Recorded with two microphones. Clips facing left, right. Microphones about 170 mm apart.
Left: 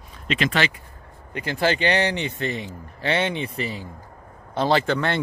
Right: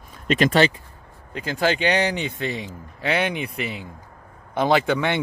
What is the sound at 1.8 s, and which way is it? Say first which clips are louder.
Speech: even; 15° right (ahead or behind).